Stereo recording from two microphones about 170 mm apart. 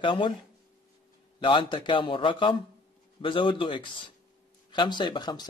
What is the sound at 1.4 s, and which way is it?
Speech, 30° left (ahead or behind).